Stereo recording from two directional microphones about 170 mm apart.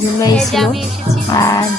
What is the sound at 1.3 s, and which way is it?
Speech, 20° left (ahead or behind).